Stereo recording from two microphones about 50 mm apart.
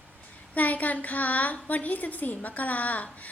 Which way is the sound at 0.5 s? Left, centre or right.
Left.